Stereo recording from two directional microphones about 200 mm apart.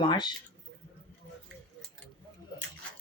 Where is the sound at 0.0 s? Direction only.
25° left (ahead or behind).